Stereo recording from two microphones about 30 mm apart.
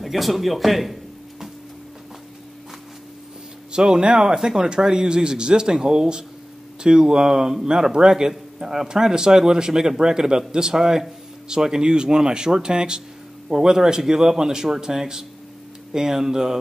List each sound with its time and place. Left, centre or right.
0.0 s a man's voice: centre
3.7 s speech: right
4.2 s speech: right